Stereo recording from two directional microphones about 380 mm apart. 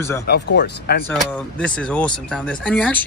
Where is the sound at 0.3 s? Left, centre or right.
Left.